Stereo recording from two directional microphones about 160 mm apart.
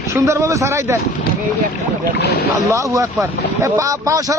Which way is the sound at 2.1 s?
90° left.